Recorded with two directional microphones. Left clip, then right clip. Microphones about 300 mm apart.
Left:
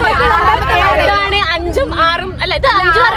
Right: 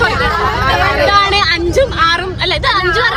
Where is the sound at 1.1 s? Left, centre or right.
Centre.